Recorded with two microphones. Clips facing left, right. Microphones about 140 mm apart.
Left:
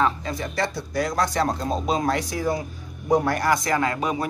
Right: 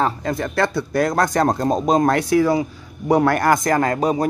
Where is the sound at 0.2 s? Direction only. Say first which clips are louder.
Right 6 dB; 55° right (ahead or behind); by 2.6 s 80° right.